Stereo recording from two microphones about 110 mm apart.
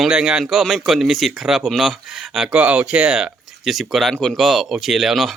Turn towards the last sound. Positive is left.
turn(degrees=0)  # may be behind; listen again after turning